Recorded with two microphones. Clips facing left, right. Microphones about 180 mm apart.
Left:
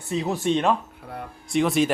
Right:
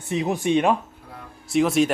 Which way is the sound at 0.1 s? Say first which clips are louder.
Right 2 dB; 15° right (ahead or behind).